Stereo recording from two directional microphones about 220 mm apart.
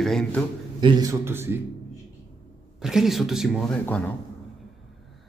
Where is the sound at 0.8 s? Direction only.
20° right (ahead or behind).